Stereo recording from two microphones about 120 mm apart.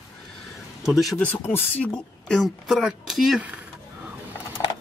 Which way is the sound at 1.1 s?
15° left (ahead or behind).